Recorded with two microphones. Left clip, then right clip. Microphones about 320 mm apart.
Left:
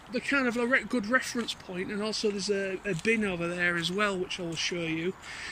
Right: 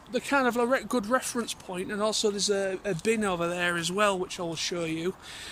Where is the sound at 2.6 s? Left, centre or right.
Right.